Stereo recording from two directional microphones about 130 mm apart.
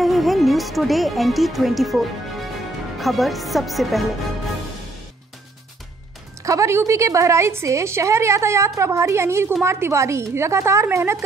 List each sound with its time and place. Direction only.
0.0 s speech: centre (ahead or behind)
6.4 s a woman's voice: 25° right (ahead or behind)